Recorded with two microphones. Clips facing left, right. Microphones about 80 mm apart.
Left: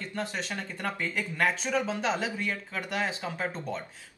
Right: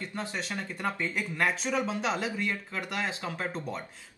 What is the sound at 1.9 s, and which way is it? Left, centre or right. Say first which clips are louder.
Speech: left 1 dB; left.